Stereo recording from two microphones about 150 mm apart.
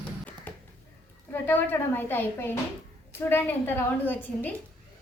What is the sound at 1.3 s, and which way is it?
A woman's voice, 15° left (ahead or behind).